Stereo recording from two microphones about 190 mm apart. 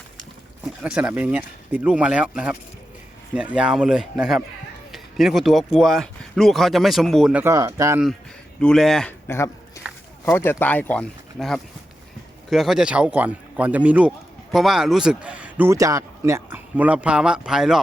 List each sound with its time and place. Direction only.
0.6 s speech: 5° right (ahead or behind)
7.4 s speech: 15° right (ahead or behind)
8.6 s speech: centre (ahead or behind)